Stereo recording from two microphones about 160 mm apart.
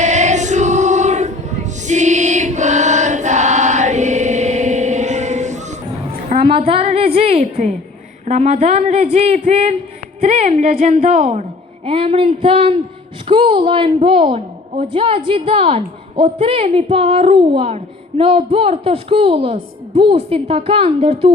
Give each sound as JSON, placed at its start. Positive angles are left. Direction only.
{"t": 0.0, "sound": "choir", "side_deg": -45}
{"t": 6.5, "sound": "a sound", "side_deg": -35}
{"t": 8.3, "sound": "a woman's voice", "side_deg": -45}
{"t": 11.9, "sound": "a woman's voice", "side_deg": -35}